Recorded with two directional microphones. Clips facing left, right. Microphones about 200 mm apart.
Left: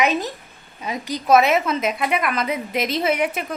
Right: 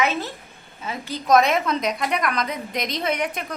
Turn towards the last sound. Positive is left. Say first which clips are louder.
# left 4 dB
turn(degrees=5)  # may be behind; listen again after turning